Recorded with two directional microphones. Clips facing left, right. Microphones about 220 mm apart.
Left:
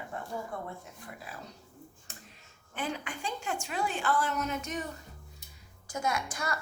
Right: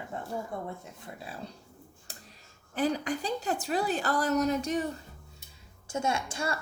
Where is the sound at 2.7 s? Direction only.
35° right (ahead or behind).